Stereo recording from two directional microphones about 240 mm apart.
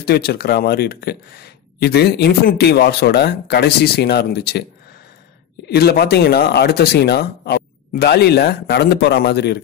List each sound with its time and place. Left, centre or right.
0.0 s speech: left
5.7 s speech: left